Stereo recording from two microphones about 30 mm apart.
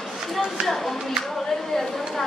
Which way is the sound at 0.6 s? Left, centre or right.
Centre.